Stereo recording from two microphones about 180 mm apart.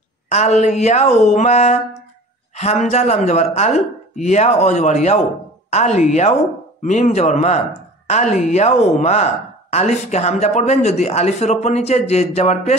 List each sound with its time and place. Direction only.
0.3 s speech: 40° left (ahead or behind)